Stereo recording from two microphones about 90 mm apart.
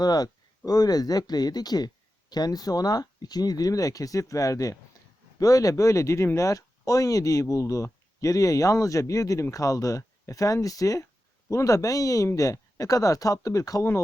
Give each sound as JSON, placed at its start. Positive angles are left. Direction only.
{"t": 0.0, "sound": "speech", "side_deg": 45}